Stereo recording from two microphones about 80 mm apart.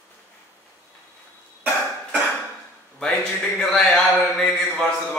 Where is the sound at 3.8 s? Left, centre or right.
Centre.